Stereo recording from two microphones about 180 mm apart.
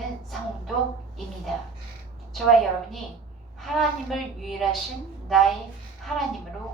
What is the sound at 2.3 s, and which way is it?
A woman's voice, centre (ahead or behind).